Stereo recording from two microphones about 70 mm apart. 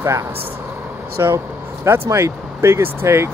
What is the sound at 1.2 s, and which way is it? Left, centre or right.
Speech, right.